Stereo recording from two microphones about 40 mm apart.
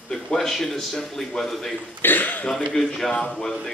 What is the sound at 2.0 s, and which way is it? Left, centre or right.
Speech, left.